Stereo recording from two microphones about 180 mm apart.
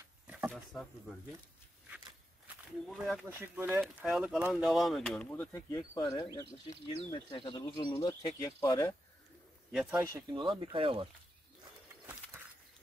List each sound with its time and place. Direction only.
0.5 s wild animals: centre (ahead or behind)
2.9 s speech: centre (ahead or behind)
3.3 s speech: 10° right (ahead or behind); by 8.9 s 15° left (ahead or behind)
9.7 s speech: 10° right (ahead or behind)
10.4 s speech: 25° right (ahead or behind)